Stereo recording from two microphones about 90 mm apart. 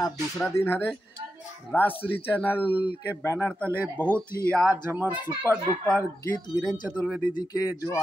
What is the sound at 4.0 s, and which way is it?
Speech, 15° left (ahead or behind).